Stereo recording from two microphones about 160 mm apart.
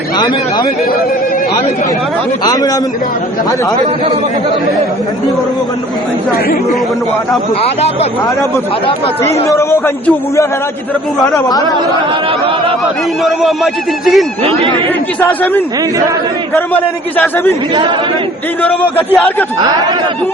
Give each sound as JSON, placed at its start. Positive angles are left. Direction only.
{"t": 2.4, "sound": "speech", "side_deg": 25}
{"t": 9.2, "sound": "a man's voice", "side_deg": 20}
{"t": 13.2, "sound": "speech", "side_deg": 0}
{"t": 14.4, "sound": "speech", "side_deg": -35}
{"t": 15.2, "sound": "a man's voice", "side_deg": 10}
{"t": 18.6, "sound": "a man's voice", "side_deg": 10}